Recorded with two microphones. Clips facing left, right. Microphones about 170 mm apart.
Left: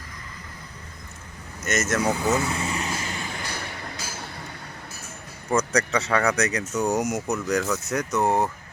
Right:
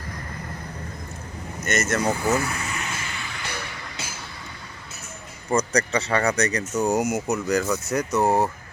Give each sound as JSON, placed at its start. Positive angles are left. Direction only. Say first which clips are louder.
{"t": 1.6, "sound": "speech", "louder": "even", "side_deg": 0}
{"t": 2.1, "sound": "vehicle", "louder": "even", "side_deg": 20}
{"t": 5.5, "sound": "speech", "louder": "right 1 dB", "side_deg": 0}